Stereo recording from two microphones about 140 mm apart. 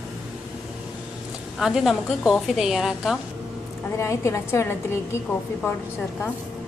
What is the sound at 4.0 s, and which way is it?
A woman's voice, 20° left (ahead or behind).